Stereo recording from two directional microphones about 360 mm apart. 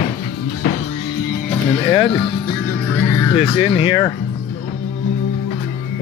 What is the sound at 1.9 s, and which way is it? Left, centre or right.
Speech, centre.